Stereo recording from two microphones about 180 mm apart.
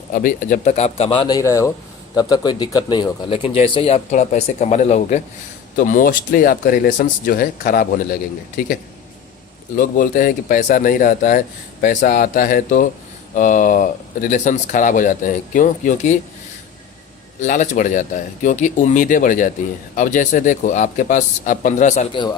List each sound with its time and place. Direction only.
0.1 s speech: 50° left (ahead or behind)
9.7 s speech: 50° left (ahead or behind)
17.4 s speech: 45° left (ahead or behind)
22.1 s a man's voice: 25° left (ahead or behind)